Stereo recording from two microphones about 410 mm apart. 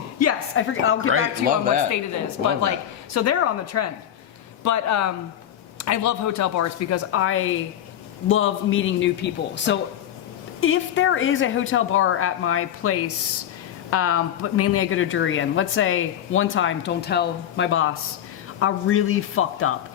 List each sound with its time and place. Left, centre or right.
0.2 s a sound: left
1.1 s speech: centre
3.2 s speech: left